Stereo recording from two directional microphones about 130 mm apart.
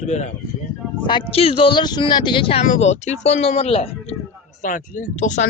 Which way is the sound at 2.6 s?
60° left (ahead or behind).